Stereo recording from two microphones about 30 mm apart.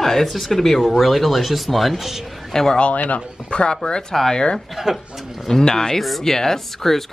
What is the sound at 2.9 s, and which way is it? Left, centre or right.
Speech, left.